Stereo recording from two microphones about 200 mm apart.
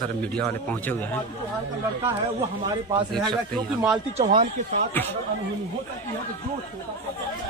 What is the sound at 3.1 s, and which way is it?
Speech, centre (ahead or behind).